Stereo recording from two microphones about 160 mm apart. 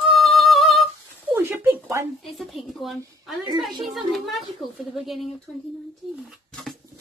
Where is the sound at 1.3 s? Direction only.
15° right (ahead or behind).